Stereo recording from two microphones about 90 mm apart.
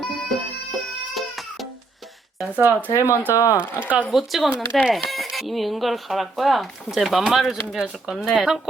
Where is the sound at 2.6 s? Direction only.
20° right (ahead or behind).